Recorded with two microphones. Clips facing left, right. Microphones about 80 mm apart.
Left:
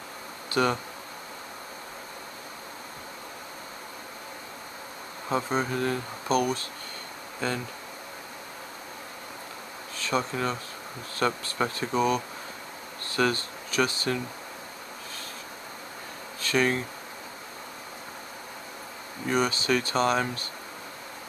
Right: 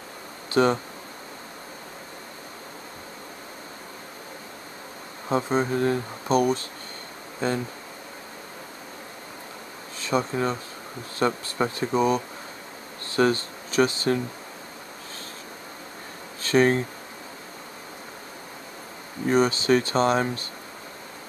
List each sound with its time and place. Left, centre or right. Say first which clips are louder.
0.6 s speech: right 5 dB; right
5.3 s speech: right 4 dB; right
9.9 s speech: right 3 dB; right
16.4 s speech: right 5 dB; right
19.2 s speech: right 5 dB; right